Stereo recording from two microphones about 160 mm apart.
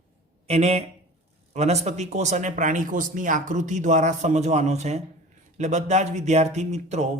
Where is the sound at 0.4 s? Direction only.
40° right (ahead or behind).